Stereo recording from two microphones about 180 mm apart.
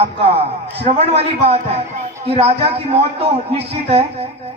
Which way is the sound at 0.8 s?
35° right (ahead or behind).